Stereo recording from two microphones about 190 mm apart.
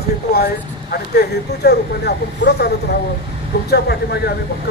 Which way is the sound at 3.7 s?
55° left (ahead or behind).